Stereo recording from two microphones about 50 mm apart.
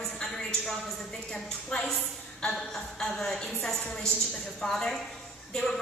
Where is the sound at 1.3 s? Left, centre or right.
Centre.